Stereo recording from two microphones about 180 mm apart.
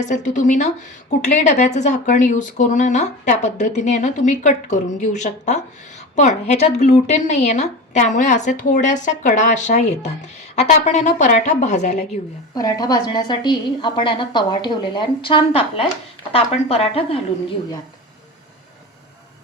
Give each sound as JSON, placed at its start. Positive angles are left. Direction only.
{"t": 0.0, "sound": "speech", "side_deg": 45}
{"t": 12.5, "sound": "a woman's voice", "side_deg": 20}